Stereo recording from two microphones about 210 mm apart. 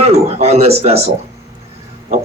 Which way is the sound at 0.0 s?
30° right (ahead or behind).